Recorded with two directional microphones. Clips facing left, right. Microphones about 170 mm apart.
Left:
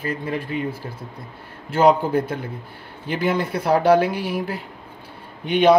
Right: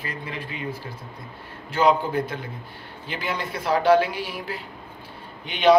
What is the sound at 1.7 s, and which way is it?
Speech, 45° left (ahead or behind).